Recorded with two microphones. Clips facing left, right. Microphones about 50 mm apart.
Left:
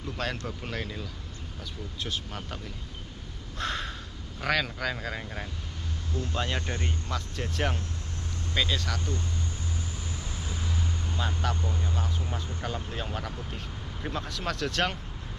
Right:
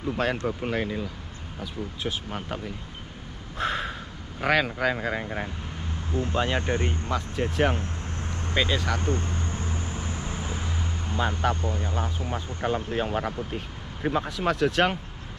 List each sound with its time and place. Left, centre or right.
0.0 s speech: centre
3.5 s a sound: centre
4.4 s speech: centre
7.8 s vehicle: right
8.5 s speech: centre
9.0 s vehicle: right
11.7 s speech: right